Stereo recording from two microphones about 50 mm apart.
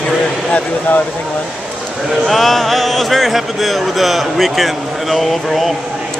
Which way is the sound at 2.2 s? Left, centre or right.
Centre.